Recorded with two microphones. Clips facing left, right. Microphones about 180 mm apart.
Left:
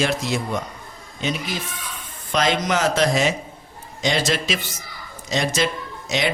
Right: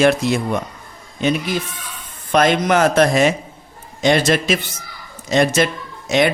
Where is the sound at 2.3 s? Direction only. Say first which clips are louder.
Right 6 dB; 55° right (ahead or behind).